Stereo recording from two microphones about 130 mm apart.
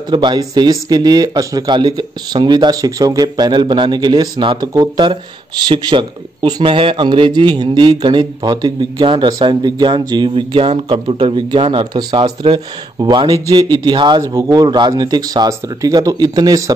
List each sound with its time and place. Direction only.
0.1 s a man's voice: 35° right (ahead or behind)